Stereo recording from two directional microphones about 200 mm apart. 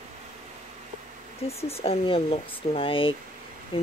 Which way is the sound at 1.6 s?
30° left (ahead or behind).